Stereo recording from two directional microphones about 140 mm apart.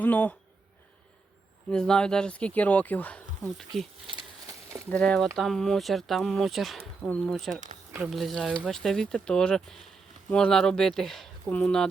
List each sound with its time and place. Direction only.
0.0 s speech: 10° left (ahead or behind)
1.7 s speech: 5° left (ahead or behind)
4.9 s speech: 5° left (ahead or behind)
7.5 s speech: 60° right (ahead or behind)
7.9 s speech: 5° right (ahead or behind)